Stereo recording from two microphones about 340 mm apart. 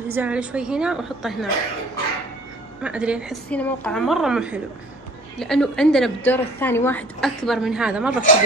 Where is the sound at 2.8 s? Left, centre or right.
Centre.